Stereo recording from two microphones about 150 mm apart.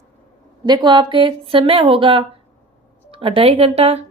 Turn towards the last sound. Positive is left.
turn(degrees=-45)  # may be behind; listen again after turning